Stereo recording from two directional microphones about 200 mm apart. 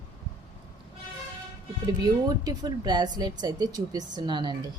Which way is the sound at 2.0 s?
20° right (ahead or behind).